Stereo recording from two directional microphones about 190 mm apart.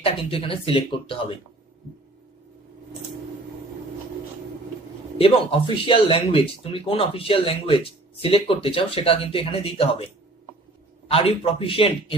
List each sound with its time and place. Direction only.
0.0 s speech: 30° left (ahead or behind)
5.2 s speech: 30° left (ahead or behind)